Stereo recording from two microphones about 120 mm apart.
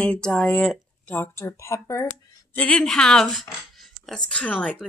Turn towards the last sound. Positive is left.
turn(degrees=10)  # may be behind; listen again after turning